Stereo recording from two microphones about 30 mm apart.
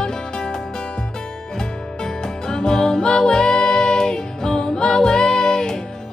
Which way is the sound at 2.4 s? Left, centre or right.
Left.